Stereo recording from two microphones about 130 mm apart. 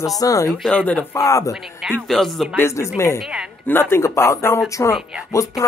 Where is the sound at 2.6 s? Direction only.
20° left (ahead or behind).